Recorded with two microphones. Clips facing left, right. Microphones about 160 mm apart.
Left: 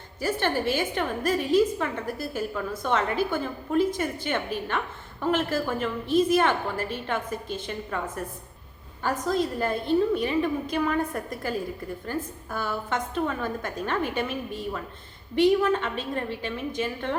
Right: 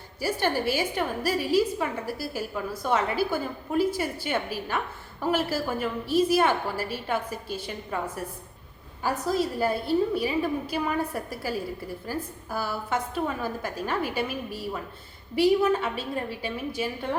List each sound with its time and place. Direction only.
0.2 s a woman's voice: 10° right (ahead or behind)